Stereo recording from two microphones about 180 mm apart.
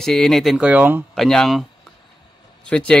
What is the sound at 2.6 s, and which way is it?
Speech, 5° left (ahead or behind).